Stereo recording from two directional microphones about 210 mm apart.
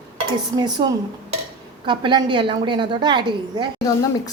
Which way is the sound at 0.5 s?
20° right (ahead or behind).